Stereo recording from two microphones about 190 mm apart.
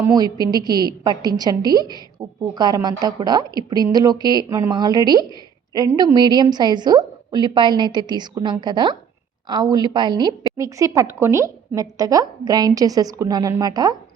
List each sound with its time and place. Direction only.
0.0 s a woman's voice: 20° right (ahead or behind)